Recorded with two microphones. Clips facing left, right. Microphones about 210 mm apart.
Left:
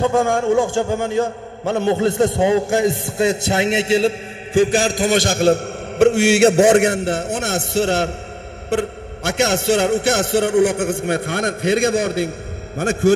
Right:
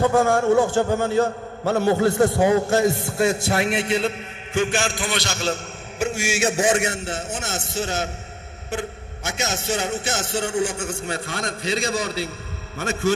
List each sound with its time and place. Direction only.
0.0 s a man's voice: 15° left (ahead or behind); by 12.3 s 55° left (ahead or behind)